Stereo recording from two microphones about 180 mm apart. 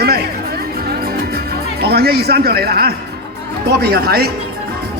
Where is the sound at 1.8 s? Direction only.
60° right (ahead or behind).